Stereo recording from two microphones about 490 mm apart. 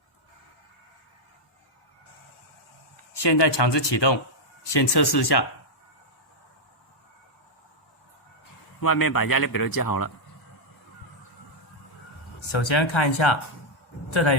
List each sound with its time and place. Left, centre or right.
3.1 s speech: left
8.8 s speech: left
12.5 s speech: left